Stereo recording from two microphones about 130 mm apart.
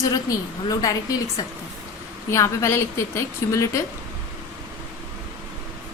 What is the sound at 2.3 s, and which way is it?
A woman's voice, 25° left (ahead or behind).